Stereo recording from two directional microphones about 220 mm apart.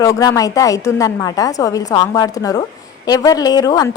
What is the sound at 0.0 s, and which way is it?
A woman's voice, 15° left (ahead or behind).